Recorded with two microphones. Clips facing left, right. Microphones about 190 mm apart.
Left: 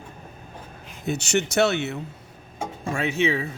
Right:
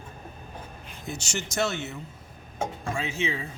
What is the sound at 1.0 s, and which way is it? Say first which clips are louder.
Speech: left 10 dB; 65° left (ahead or behind).